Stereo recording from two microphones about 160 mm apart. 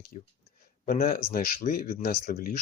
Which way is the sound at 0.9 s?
65° left (ahead or behind).